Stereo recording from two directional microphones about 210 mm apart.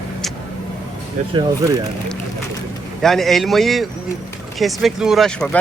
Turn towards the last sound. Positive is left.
turn(degrees=5)  # may be behind; listen again after turning